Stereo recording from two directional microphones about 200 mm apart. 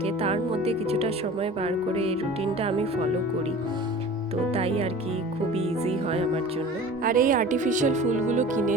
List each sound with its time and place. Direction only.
0.0 s speech: 30° right (ahead or behind)
4.5 s speech: 30° right (ahead or behind)
7.0 s speech: 45° right (ahead or behind)